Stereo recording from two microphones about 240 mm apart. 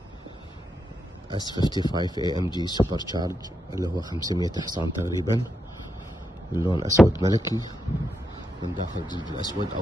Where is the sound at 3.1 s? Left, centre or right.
Centre.